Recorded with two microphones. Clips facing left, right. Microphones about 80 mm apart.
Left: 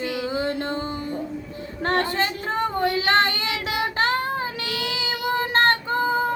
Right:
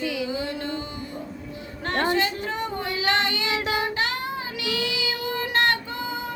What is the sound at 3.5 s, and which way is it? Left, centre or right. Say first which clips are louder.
Child singing: right 1 dB; right.